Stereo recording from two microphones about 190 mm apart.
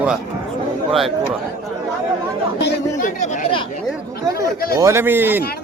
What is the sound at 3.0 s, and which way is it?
Chatter, 40° left (ahead or behind).